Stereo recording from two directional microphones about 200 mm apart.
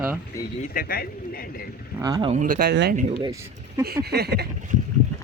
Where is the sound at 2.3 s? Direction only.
45° right (ahead or behind).